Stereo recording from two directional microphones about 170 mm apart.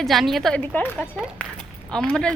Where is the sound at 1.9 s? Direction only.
5° left (ahead or behind).